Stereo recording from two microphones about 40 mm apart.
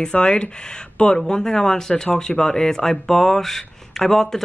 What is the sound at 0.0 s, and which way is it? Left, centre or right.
Speech, left.